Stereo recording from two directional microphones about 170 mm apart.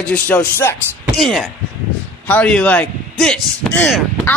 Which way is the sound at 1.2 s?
Centre (ahead or behind).